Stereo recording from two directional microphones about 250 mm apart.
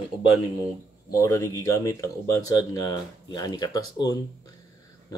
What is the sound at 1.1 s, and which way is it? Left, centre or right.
Speech, centre.